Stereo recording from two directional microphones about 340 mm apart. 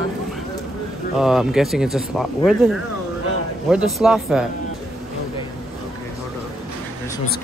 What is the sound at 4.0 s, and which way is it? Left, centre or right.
Speech, centre.